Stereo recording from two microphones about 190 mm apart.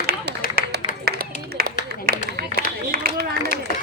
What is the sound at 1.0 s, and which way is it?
Run, 55° right (ahead or behind).